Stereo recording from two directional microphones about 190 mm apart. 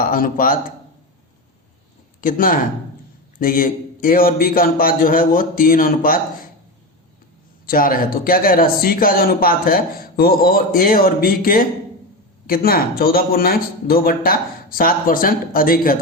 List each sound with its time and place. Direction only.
0.0 s a man's voice: 45° left (ahead or behind)
2.2 s a man's voice: 45° left (ahead or behind)
7.7 s a man's voice: 50° left (ahead or behind)